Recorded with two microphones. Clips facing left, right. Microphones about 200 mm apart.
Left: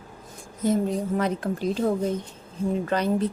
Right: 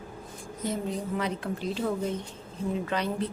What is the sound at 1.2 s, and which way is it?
Speech, 45° left (ahead or behind).